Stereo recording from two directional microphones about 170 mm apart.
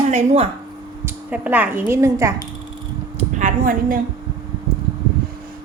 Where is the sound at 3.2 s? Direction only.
45° right (ahead or behind).